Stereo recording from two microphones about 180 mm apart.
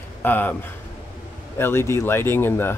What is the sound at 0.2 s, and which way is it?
Speech, 10° left (ahead or behind).